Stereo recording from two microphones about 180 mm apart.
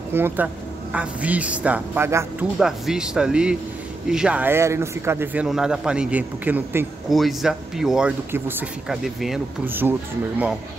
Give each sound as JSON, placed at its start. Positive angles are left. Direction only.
{"t": 0.1, "sound": "a man's voice", "side_deg": -10}
{"t": 2.6, "sound": "a man's voice", "side_deg": -5}
{"t": 7.1, "sound": "speech", "side_deg": 0}